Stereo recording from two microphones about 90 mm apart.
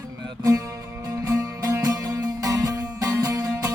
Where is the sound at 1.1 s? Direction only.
40° right (ahead or behind).